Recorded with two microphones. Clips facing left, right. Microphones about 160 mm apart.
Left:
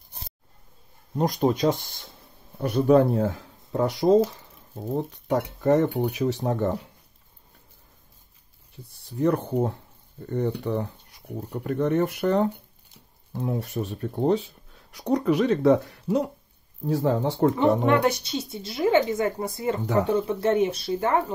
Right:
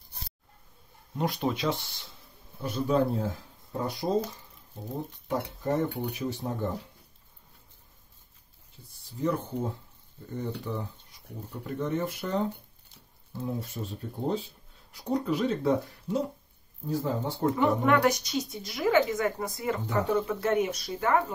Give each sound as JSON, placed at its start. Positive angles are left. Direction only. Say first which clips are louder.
{"t": 1.1, "sound": "speech", "louder": "left 6 dB", "side_deg": 40}
{"t": 2.6, "sound": "speech", "louder": "left 8 dB", "side_deg": 65}
{"t": 4.9, "sound": "speech", "louder": "left 7 dB", "side_deg": 75}
{"t": 9.1, "sound": "speech", "louder": "left 7 dB", "side_deg": 65}
{"t": 17.6, "sound": "a woman's voice", "louder": "even", "side_deg": 30}